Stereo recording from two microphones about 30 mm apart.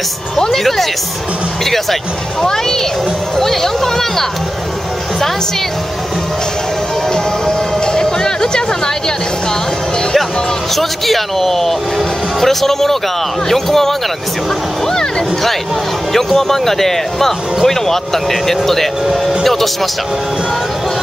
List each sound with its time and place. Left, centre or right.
0.5 s speech: centre
7.8 s music: left
10.7 s speech: centre
14.9 s speech: left
16.3 s speech: centre